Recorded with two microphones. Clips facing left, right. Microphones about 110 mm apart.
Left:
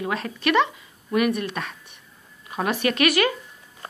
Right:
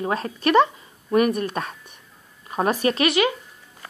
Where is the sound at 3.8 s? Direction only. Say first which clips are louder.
Left 3 dB; 30° left (ahead or behind).